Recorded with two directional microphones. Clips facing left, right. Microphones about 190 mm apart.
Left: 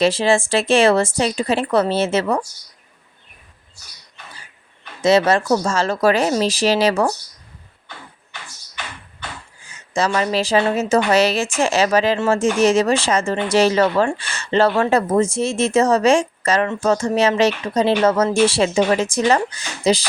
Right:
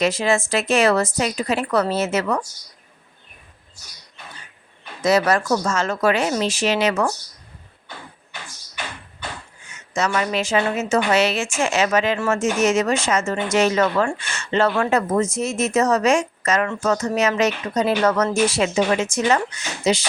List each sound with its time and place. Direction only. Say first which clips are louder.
0.0 s a woman's voice: left 3 dB; 30° left (ahead or behind)
4.9 s a woman's voice: left 3 dB; 25° left (ahead or behind)
9.6 s a woman's voice: left 3 dB; 30° left (ahead or behind)